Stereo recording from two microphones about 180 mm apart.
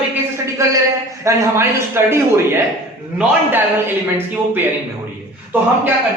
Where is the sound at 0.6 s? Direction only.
15° right (ahead or behind).